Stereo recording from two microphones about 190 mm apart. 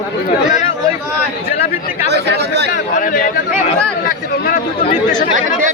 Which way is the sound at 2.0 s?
60° right (ahead or behind).